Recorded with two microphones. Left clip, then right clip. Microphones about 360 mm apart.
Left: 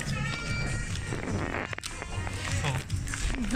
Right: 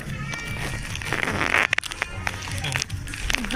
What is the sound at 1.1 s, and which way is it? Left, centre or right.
Music, right.